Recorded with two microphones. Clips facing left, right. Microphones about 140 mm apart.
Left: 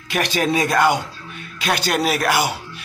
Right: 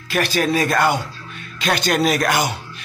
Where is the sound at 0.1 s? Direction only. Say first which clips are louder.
Right 1 dB; 20° left (ahead or behind).